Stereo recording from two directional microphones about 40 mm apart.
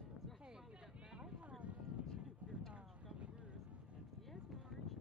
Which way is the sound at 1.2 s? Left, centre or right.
Right.